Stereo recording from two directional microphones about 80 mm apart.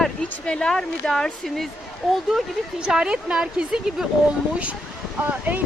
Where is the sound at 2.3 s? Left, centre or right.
Centre.